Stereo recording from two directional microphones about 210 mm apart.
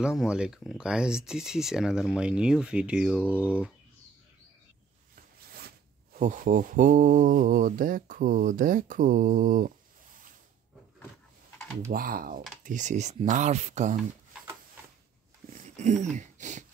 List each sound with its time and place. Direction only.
0.0 s speech: 5° right (ahead or behind)
3.3 s speech: 10° left (ahead or behind)
5.1 s zipper: 45° right (ahead or behind)
6.1 s mantra: 40° right (ahead or behind)
11.9 s speech: 45° right (ahead or behind)
12.6 s mantra: 35° right (ahead or behind)
15.5 s a sound: 35° right (ahead or behind)